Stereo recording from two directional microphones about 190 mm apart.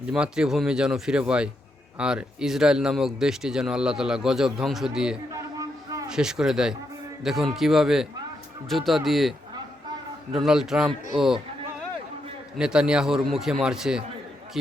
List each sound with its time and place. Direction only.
0.0 s speech: 5° right (ahead or behind)
5.3 s a sound: 15° right (ahead or behind)
6.1 s speech: 5° right (ahead or behind)
10.3 s speech: 5° right (ahead or behind)
12.5 s a man's voice: 5° right (ahead or behind)